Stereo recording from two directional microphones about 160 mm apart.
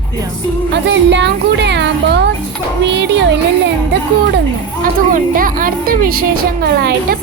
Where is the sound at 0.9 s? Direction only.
90° right.